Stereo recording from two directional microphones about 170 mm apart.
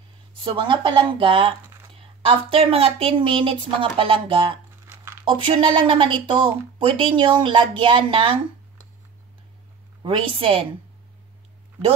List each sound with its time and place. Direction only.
0.4 s a woman's voice: 30° right (ahead or behind)
4.8 s a sound: 15° right (ahead or behind)
5.2 s a woman's voice: 30° right (ahead or behind)
10.0 s a woman's voice: 30° right (ahead or behind)